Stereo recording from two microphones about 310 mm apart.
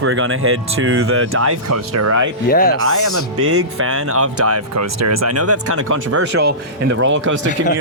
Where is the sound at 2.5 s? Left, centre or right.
Left.